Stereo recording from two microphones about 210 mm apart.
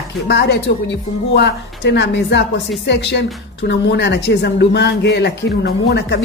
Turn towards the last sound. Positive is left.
turn(degrees=55)  # may be behind; listen again after turning